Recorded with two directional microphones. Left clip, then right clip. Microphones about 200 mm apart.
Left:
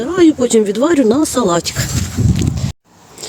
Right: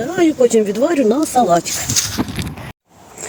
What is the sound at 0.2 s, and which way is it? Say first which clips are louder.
Speech: left 2 dB; 25° left (ahead or behind).